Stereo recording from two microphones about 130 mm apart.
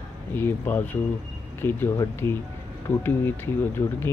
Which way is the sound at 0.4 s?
15° left (ahead or behind).